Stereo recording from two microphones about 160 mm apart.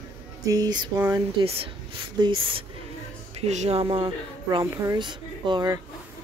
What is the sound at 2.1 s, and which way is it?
Speech, 30° right (ahead or behind).